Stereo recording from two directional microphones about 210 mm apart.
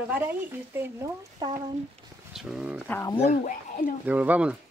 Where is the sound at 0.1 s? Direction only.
10° right (ahead or behind).